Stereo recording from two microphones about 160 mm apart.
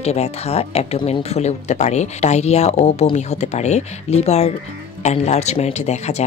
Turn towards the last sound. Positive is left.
turn(degrees=45)  # may be behind; listen again after turning